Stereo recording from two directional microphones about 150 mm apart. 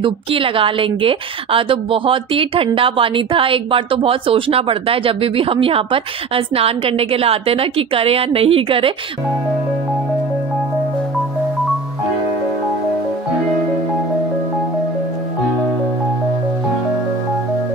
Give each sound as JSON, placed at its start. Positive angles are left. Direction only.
{"t": 0.0, "sound": "a woman's voice", "side_deg": -35}